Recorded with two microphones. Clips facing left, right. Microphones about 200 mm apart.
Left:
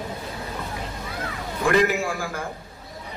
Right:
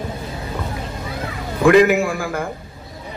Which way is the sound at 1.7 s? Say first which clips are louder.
Right 8 dB; 55° right (ahead or behind).